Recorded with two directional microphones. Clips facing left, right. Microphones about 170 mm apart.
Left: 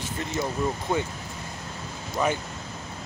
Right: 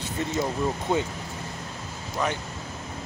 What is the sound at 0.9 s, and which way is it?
Speech, 25° right (ahead or behind).